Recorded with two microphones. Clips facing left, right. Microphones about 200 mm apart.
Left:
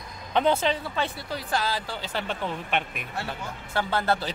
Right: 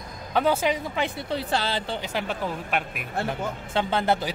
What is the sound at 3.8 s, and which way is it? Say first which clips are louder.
Speech: right 2 dB; 20° right (ahead or behind).